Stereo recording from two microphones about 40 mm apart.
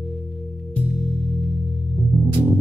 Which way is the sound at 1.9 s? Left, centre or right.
Centre.